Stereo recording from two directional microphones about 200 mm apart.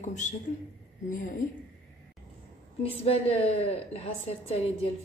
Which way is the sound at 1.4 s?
35° left (ahead or behind).